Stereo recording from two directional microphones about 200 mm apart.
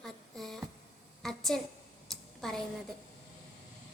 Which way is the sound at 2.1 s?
Centre (ahead or behind).